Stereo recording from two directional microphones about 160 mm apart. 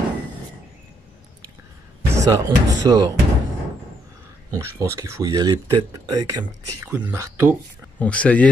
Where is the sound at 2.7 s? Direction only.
25° right (ahead or behind).